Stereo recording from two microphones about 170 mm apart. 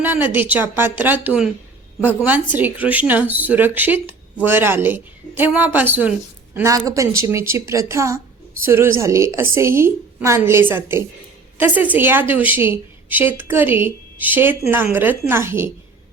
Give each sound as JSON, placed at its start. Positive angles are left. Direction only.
{"t": 0.0, "sound": "a woman's voice", "side_deg": -10}